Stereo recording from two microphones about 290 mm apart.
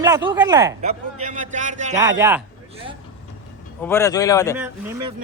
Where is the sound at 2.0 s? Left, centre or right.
Centre.